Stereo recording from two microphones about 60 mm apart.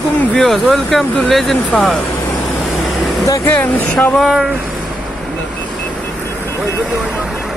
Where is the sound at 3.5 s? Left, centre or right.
Left.